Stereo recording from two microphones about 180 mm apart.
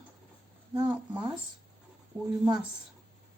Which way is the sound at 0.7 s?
25° right (ahead or behind).